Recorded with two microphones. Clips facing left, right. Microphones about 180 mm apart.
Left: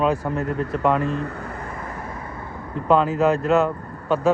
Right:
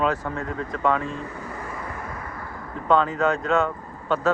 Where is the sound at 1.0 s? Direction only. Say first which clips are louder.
Left 6 dB; 65° left (ahead or behind).